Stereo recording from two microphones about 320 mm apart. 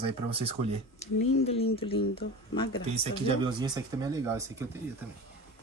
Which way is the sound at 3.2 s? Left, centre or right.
Centre.